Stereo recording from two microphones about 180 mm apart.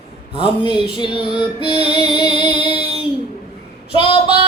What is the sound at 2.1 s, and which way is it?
Music, 25° left (ahead or behind).